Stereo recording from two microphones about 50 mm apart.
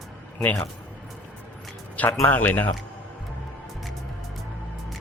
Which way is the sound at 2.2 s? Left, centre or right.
Left.